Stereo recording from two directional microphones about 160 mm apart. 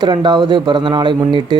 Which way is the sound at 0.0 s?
30° right (ahead or behind).